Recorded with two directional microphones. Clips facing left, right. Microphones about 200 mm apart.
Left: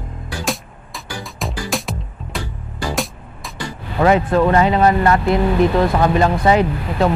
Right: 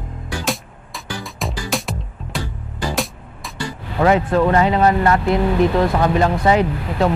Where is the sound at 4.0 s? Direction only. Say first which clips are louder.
Left 1 dB; 20° left (ahead or behind).